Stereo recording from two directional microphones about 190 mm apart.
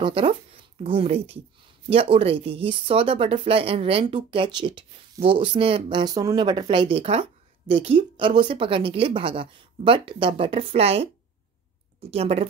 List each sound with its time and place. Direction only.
0.0 s speech: 30° right (ahead or behind)